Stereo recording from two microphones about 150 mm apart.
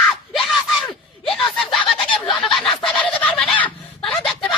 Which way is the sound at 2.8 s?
10° left (ahead or behind).